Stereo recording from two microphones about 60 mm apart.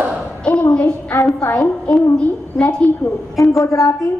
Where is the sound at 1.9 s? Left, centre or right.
Centre.